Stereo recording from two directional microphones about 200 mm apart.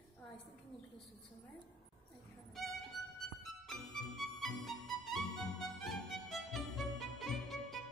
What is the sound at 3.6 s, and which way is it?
Music, centre (ahead or behind).